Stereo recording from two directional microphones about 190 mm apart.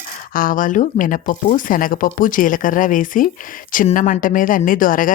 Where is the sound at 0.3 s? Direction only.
45° left (ahead or behind).